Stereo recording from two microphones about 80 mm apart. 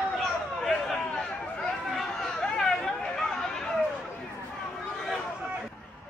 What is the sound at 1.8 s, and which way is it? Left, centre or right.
Chatter, centre.